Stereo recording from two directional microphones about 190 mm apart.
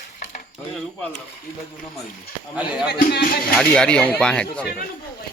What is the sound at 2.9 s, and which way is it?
Speech, 55° left (ahead or behind).